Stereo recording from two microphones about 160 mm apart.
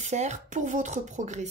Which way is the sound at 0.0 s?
45° right (ahead or behind).